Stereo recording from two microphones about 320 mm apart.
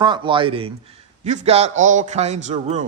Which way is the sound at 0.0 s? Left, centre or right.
Centre.